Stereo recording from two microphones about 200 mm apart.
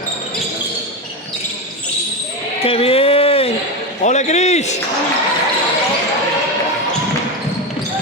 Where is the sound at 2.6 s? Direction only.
30° left (ahead or behind).